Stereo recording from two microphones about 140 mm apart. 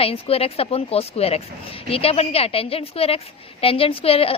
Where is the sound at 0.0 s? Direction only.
45° left (ahead or behind).